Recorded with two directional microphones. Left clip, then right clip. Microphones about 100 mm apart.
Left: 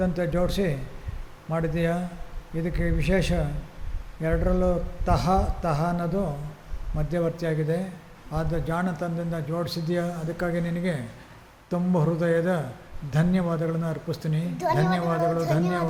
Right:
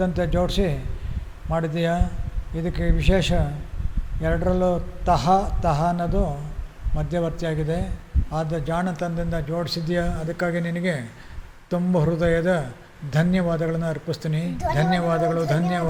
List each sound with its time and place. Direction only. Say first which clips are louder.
0.0 s a man's voice: right 3 dB; 10° right (ahead or behind)